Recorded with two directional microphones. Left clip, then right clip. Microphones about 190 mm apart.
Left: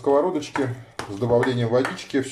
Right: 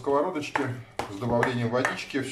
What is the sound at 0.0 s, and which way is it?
Speech, 35° left (ahead or behind).